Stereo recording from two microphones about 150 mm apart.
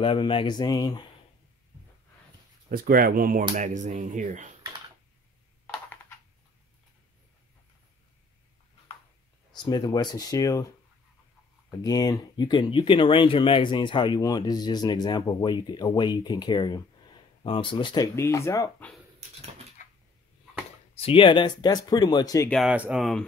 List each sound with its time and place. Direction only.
0.0 s speech: 35° left (ahead or behind)
2.7 s speech: 75° right (ahead or behind)
3.5 s speech: 55° right (ahead or behind)
9.7 s speech: 25° left (ahead or behind)
11.7 s speech: 25° left (ahead or behind)
19.8 s cupboard open or close: 60° left (ahead or behind)
20.9 s speech: 40° left (ahead or behind)
22.5 s speech: centre (ahead or behind)